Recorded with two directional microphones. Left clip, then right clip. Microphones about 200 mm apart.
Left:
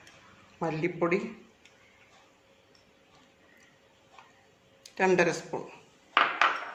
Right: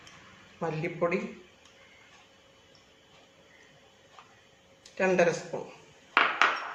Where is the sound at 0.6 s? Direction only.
60° left (ahead or behind).